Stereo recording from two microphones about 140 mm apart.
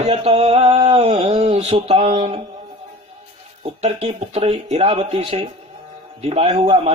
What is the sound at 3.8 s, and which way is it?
Music, 50° right (ahead or behind).